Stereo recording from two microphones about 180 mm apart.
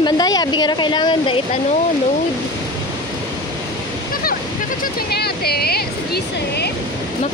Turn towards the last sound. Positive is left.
turn(degrees=60)  # may be behind; listen again after turning